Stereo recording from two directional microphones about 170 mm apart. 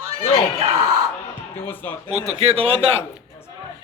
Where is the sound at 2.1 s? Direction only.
40° right (ahead or behind).